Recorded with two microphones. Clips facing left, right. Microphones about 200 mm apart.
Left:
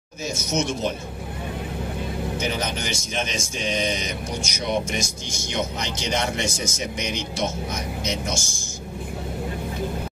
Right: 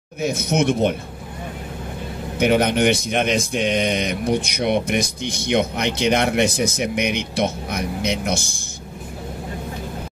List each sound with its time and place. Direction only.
0.2 s speech: 60° right (ahead or behind)
2.3 s speech: 60° right (ahead or behind)